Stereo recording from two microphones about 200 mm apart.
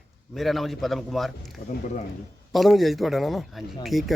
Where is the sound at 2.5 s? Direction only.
Centre (ahead or behind).